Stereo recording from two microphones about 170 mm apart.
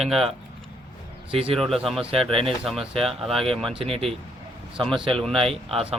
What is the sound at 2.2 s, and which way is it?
Speech, 35° right (ahead or behind).